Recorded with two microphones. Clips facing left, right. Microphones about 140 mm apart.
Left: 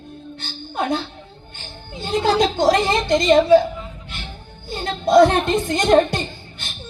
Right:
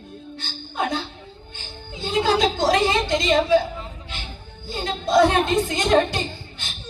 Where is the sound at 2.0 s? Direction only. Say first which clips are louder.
Left 2 dB; 50° left (ahead or behind).